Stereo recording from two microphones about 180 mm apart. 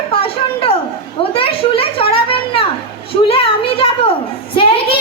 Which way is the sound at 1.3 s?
30° left (ahead or behind).